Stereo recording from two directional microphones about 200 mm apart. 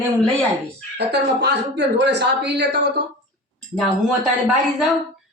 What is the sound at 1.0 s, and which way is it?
Speech, 55° right (ahead or behind).